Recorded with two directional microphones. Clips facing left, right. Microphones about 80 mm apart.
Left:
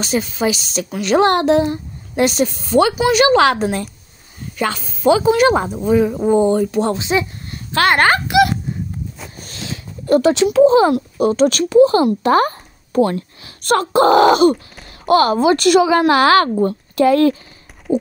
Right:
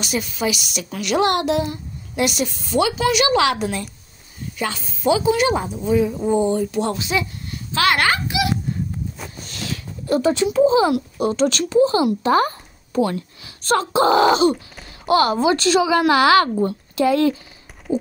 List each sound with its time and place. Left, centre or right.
0.0 s a woman's voice: left
4.6 s speech: left
6.8 s speech: left
7.5 s speech: left
8.3 s a sound: left
10.2 s speech: left
10.8 s speech: left
15.9 s a woman's voice: left